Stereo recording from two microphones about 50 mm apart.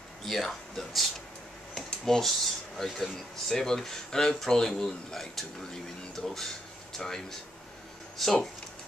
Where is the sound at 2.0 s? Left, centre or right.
Centre.